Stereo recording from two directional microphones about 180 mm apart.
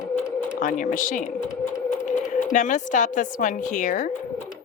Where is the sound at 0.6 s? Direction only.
45° left (ahead or behind).